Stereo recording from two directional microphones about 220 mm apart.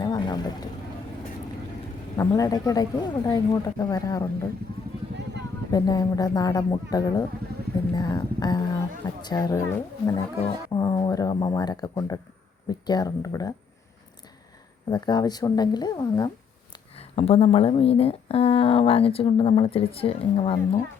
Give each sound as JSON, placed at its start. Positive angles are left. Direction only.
{"t": 0.0, "sound": "vehicle", "side_deg": 20}
{"t": 2.1, "sound": "speech", "side_deg": 15}
{"t": 5.7, "sound": "speech", "side_deg": 15}
{"t": 7.9, "sound": "a sound", "side_deg": 20}
{"t": 9.2, "sound": "speech", "side_deg": 15}
{"t": 14.8, "sound": "speech", "side_deg": 20}